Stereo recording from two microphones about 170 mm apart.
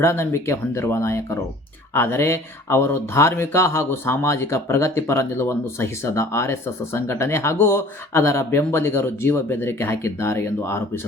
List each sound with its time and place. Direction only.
0.0 s speech: 15° left (ahead or behind)